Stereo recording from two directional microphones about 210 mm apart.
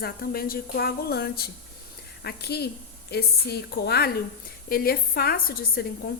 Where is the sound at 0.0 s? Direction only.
45° left (ahead or behind).